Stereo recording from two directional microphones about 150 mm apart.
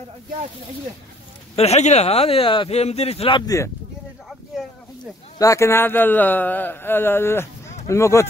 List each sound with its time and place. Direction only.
1.6 s speech: 45° left (ahead or behind)
3.4 s speech: 20° left (ahead or behind)
5.4 s speech: 20° left (ahead or behind)